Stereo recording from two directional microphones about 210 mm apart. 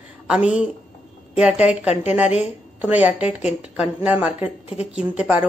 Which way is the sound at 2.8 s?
10° right (ahead or behind).